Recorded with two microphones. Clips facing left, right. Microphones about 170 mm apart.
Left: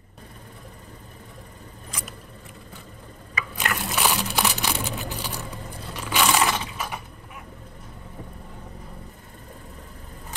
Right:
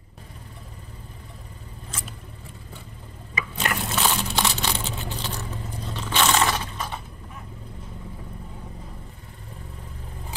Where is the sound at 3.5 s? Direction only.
10° left (ahead or behind).